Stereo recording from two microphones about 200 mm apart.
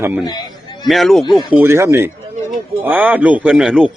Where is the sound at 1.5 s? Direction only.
10° right (ahead or behind).